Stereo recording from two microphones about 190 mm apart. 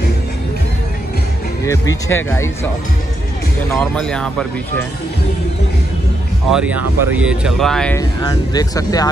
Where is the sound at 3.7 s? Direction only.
5° left (ahead or behind).